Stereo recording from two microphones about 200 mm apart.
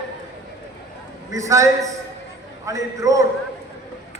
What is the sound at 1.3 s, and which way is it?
A man's voice, 15° right (ahead or behind).